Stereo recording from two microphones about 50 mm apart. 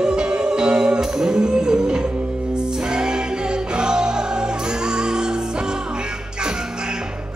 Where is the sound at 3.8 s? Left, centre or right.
Centre.